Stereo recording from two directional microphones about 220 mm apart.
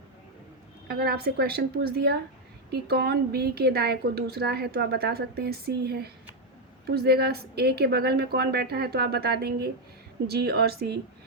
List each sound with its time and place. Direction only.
0.9 s a woman's voice: 45° right (ahead or behind)